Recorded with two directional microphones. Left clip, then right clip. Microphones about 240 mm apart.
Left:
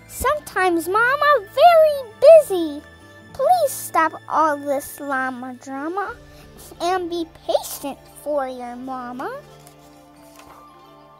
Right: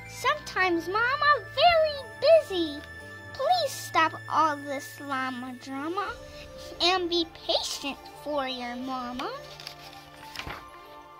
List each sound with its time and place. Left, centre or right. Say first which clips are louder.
0.2 s a child's voice: left 6 dB; left